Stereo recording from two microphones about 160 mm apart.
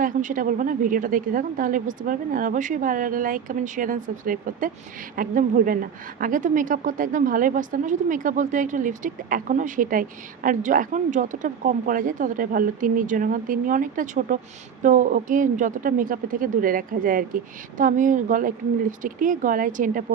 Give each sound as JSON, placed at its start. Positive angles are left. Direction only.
{"t": 0.0, "sound": "a woman's voice", "side_deg": -55}